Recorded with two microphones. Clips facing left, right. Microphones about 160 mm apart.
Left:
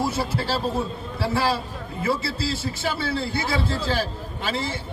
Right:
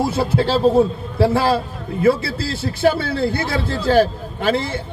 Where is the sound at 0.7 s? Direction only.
55° right (ahead or behind).